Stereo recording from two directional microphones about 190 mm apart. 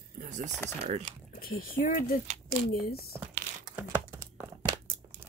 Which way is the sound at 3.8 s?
15° right (ahead or behind).